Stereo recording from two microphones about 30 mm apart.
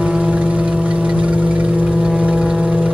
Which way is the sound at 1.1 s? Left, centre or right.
Right.